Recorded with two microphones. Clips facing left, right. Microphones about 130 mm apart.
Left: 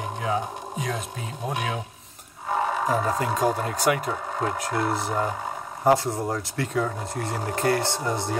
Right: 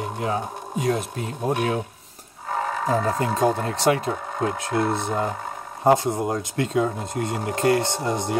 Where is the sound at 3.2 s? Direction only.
25° right (ahead or behind).